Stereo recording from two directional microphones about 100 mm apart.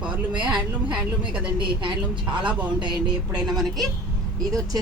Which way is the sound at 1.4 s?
55° right (ahead or behind).